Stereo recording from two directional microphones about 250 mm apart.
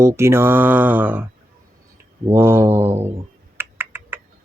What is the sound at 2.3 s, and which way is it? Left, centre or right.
Mantra, centre.